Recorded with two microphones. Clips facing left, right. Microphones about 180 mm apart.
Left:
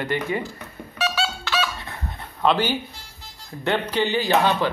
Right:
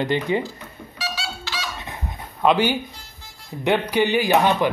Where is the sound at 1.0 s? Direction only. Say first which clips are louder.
Left 6 dB; 65° left (ahead or behind).